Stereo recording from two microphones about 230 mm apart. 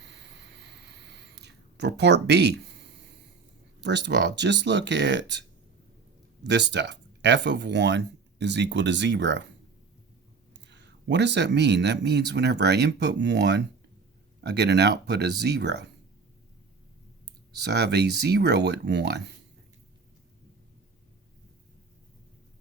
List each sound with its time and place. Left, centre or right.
0.0 s a sound: right
3.8 s speech: right
10.5 s speech: right
17.5 s speech: right